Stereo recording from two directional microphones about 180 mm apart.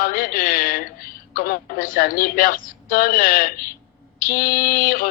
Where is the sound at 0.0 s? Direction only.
50° left (ahead or behind).